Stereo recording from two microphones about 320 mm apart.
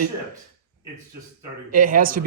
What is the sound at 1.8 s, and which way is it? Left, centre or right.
Speech, right.